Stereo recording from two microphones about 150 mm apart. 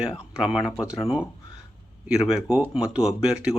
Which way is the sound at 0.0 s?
5° right (ahead or behind).